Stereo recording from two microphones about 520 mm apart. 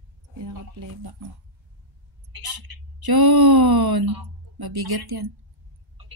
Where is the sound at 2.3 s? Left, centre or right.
Right.